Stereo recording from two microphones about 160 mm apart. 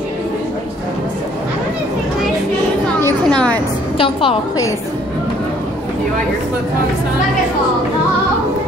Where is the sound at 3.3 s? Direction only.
5° left (ahead or behind).